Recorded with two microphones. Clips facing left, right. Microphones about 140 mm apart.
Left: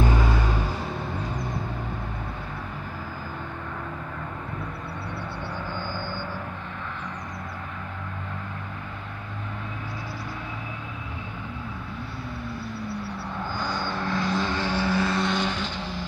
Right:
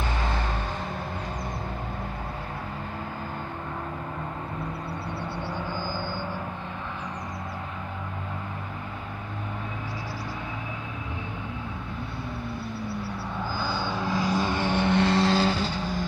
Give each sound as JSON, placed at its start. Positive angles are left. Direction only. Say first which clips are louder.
{"t": 13.6, "sound": "vehicle", "louder": "even", "side_deg": -5}